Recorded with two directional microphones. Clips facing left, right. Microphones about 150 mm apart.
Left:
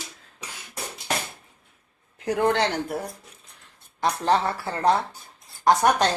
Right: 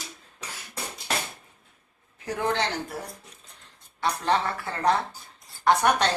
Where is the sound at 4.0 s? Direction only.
35° left (ahead or behind).